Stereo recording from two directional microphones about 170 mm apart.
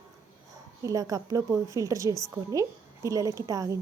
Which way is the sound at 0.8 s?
20° right (ahead or behind).